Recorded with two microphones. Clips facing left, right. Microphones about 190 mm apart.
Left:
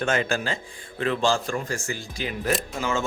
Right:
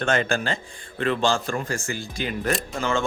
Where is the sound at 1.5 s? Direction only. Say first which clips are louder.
Right 1 dB; 55° right (ahead or behind).